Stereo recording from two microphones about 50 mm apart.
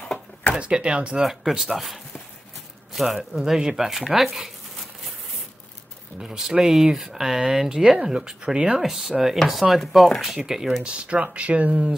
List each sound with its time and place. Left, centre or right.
0.6 s speech: centre
1.2 s speech: centre
6.2 s speech: centre
10.8 s speech: right